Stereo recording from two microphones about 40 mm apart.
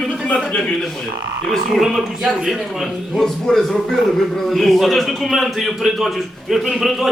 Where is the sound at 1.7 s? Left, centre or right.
Centre.